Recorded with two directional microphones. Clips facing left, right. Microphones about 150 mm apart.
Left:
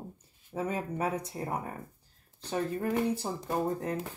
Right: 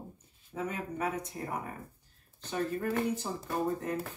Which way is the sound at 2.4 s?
35° left (ahead or behind).